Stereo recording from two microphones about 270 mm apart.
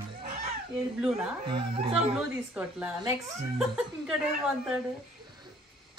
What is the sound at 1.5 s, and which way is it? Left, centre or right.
Speech, centre.